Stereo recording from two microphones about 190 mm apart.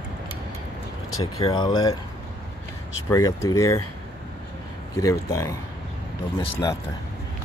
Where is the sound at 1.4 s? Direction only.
20° left (ahead or behind).